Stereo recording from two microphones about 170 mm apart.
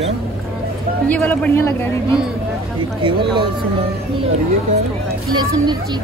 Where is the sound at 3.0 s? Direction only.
25° right (ahead or behind).